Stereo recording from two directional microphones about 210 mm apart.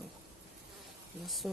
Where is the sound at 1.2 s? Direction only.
Centre (ahead or behind).